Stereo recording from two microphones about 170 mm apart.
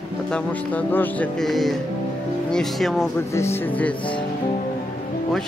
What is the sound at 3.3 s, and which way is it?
Speech, 15° left (ahead or behind).